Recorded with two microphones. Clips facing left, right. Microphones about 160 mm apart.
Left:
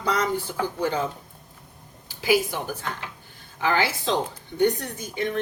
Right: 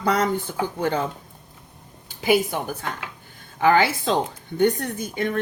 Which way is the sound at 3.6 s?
55° right (ahead or behind).